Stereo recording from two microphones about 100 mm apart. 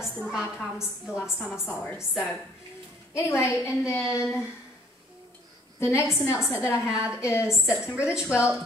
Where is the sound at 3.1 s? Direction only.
25° left (ahead or behind).